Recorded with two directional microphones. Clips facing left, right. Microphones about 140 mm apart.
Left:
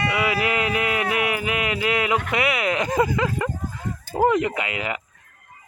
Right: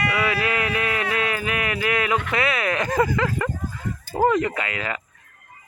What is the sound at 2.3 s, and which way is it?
Speech, 20° left (ahead or behind).